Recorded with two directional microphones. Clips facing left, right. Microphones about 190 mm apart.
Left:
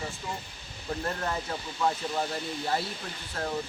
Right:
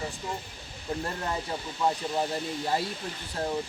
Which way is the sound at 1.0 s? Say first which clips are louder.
Left 3 dB; 15° right (ahead or behind).